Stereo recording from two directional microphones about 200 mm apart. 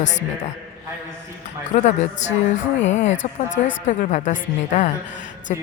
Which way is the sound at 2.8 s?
35° left (ahead or behind).